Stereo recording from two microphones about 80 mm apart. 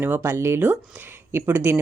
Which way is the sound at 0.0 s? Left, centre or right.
Right.